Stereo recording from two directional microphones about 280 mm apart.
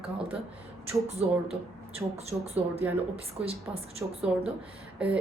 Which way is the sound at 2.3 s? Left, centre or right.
Right.